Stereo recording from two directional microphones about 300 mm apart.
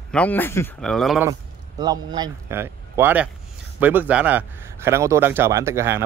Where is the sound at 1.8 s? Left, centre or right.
Centre.